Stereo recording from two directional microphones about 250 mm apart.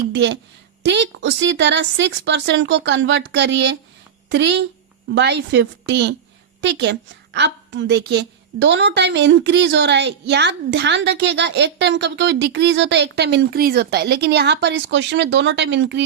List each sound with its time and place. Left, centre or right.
0.1 s a woman's voice: right